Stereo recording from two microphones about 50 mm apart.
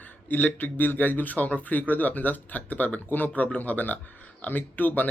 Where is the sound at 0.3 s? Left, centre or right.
Left.